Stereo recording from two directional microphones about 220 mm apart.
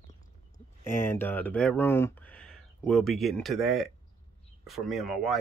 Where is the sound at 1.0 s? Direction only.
10° left (ahead or behind).